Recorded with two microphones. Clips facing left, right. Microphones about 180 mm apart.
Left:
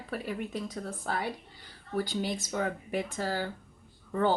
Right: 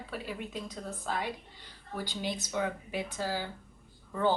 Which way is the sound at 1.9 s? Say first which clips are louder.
Left 4 dB; 45° left (ahead or behind).